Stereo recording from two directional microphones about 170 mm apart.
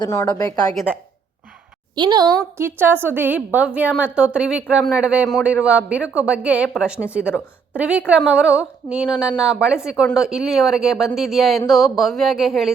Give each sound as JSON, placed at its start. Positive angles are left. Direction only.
{"t": 0.0, "sound": "a woman's voice", "side_deg": 20}
{"t": 2.0, "sound": "a woman's voice", "side_deg": -25}
{"t": 2.6, "sound": "a man's voice", "side_deg": -10}